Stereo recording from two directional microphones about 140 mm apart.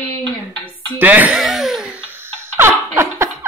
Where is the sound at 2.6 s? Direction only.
20° right (ahead or behind).